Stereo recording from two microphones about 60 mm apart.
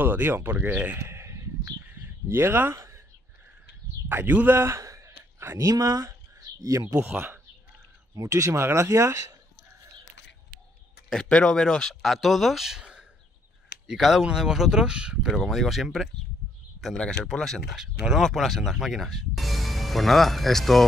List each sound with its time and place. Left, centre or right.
0.0 s speech: right
0.9 s a sound: right
1.9 s bird: right
2.2 s speech: right
2.7 s a sound: right
4.1 s a man's voice: right
6.0 s a sound: right
8.1 s speech: right
11.1 s speech: centre
15.3 s speech: centre
16.9 s speech: centre
17.7 s speech: centre